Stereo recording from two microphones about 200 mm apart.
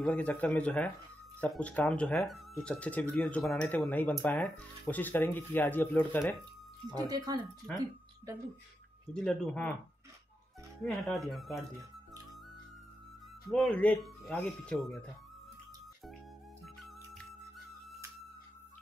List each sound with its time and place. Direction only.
0.0 s speech: 5° left (ahead or behind)
6.9 s speech: 20° right (ahead or behind)
9.1 s speech: 5° left (ahead or behind)
10.9 s speech: centre (ahead or behind)
13.5 s speech: 5° left (ahead or behind)
16.6 s music: centre (ahead or behind)